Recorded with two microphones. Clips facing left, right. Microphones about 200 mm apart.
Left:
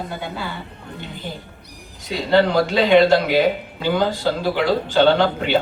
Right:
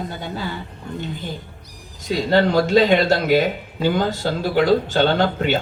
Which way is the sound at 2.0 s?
45° right (ahead or behind).